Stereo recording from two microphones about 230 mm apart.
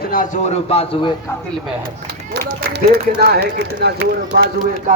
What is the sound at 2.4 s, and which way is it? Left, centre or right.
Speech, right.